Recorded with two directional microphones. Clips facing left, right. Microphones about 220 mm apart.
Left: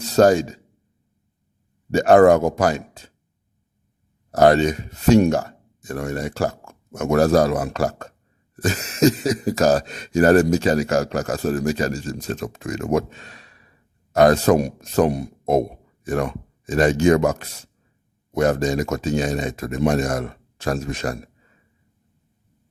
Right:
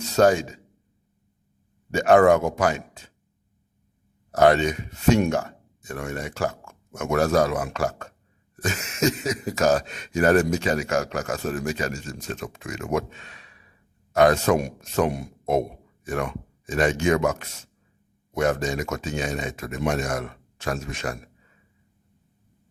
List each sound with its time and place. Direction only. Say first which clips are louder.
0.0 s speech: left 4 dB; 35° left (ahead or behind)
1.9 s speech: left 4 dB; 35° left (ahead or behind)
4.3 s speech: left 3 dB; 40° left (ahead or behind)